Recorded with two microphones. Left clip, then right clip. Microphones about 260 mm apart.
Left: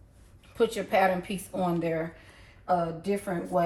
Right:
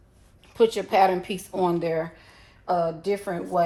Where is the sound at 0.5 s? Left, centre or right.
Right.